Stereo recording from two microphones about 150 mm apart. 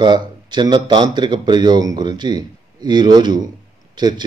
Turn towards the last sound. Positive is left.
turn(degrees=-30)  # may be behind; listen again after turning